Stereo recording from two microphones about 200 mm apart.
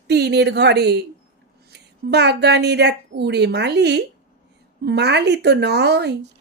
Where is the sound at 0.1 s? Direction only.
55° right (ahead or behind).